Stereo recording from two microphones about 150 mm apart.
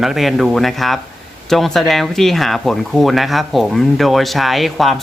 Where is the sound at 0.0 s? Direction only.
Centre (ahead or behind).